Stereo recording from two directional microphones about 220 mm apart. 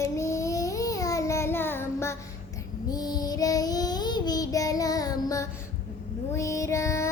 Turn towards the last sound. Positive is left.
turn(degrees=15)  # may be behind; listen again after turning